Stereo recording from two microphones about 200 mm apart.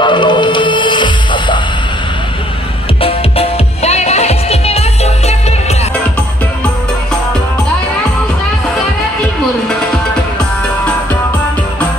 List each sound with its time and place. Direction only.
0.0 s music: 25° left (ahead or behind)
3.0 s music: 30° left (ahead or behind)